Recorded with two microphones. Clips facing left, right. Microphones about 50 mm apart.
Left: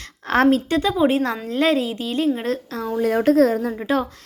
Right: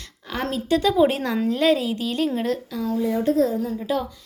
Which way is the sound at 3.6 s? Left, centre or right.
Left.